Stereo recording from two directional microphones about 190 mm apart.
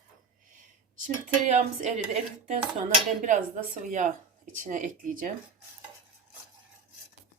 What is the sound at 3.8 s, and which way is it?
Speech, 40° right (ahead or behind).